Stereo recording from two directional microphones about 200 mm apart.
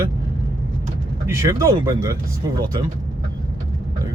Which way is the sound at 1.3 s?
15° right (ahead or behind).